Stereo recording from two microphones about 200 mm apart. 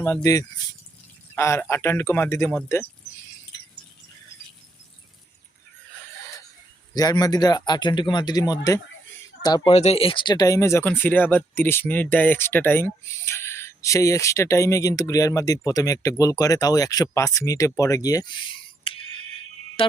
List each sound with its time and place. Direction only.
0.0 s speech: 15° left (ahead or behind)
6.9 s speech: 20° left (ahead or behind)
9.7 s speech: 30° left (ahead or behind)
17.7 s a sound: 15° left (ahead or behind)
19.8 s music: 25° left (ahead or behind)